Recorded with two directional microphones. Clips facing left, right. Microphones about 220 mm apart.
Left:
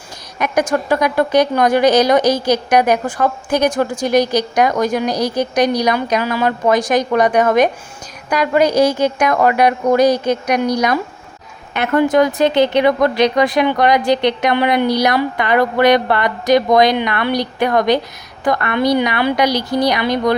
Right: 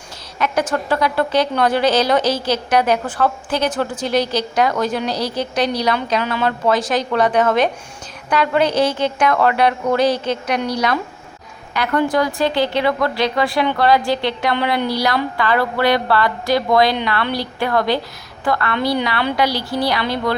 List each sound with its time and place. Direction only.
0.3 s a woman's voice: 15° left (ahead or behind)